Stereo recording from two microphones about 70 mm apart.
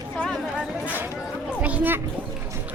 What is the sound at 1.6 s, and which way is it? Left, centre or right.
Speech, right.